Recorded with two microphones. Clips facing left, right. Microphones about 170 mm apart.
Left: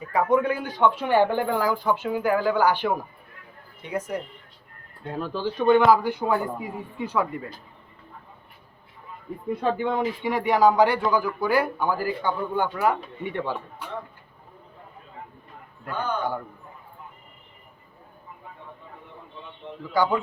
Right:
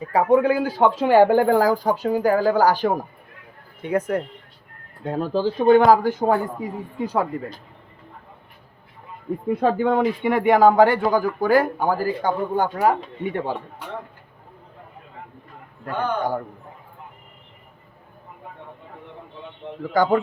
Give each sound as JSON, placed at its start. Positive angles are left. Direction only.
{"t": 0.0, "sound": "speech", "side_deg": -35}
{"t": 0.8, "sound": "speech", "side_deg": -90}
{"t": 1.1, "sound": "speech", "side_deg": -45}
{"t": 3.8, "sound": "speech", "side_deg": -55}
{"t": 5.0, "sound": "speech", "side_deg": -40}
{"t": 9.5, "sound": "speech", "side_deg": -55}
{"t": 19.8, "sound": "speech", "side_deg": -45}